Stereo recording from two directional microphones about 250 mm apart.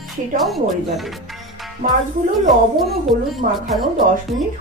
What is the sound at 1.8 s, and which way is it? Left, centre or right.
Speech, right.